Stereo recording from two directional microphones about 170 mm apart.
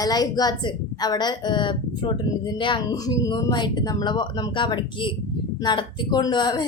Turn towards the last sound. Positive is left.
turn(degrees=25)  # may be behind; listen again after turning